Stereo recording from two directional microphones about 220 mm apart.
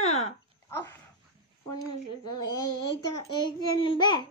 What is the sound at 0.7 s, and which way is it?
Dog, 10° left (ahead or behind).